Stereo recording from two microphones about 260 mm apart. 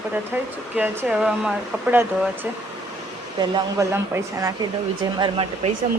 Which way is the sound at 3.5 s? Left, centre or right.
Centre.